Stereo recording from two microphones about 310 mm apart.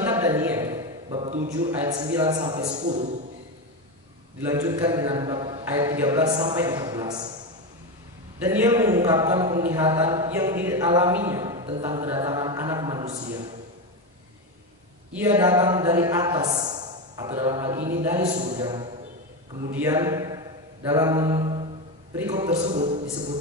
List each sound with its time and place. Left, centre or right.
0.0 s a sound: centre
1.7 s a man's voice: centre
4.4 s a man's voice: centre
8.5 s a man's voice: centre
15.1 s a man's voice: centre
18.2 s a man's voice: right
19.7 s mantra: centre
22.1 s a man's voice: centre